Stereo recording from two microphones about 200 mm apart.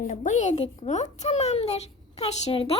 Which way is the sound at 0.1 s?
40° left (ahead or behind).